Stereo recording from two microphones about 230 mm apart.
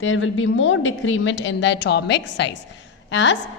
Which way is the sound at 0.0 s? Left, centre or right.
Left.